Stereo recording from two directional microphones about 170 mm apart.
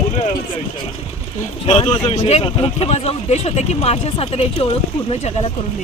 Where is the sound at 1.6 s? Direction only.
40° left (ahead or behind).